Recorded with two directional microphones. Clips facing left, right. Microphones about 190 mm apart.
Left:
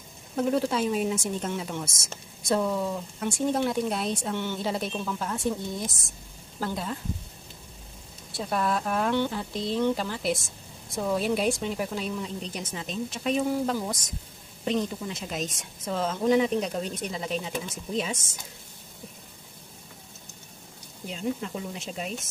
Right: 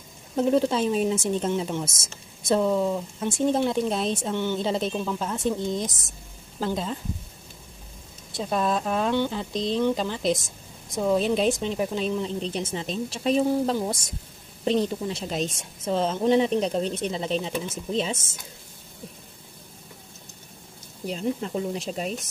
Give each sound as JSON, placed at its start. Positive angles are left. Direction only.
{"t": 0.4, "sound": "a woman's voice", "side_deg": -25}
{"t": 8.4, "sound": "a woman's voice", "side_deg": -20}
{"t": 21.1, "sound": "speech", "side_deg": -35}